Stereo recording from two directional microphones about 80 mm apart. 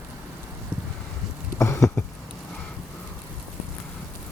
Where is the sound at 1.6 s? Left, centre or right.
Left.